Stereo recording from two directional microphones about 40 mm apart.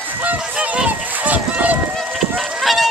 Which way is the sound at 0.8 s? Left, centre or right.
Right.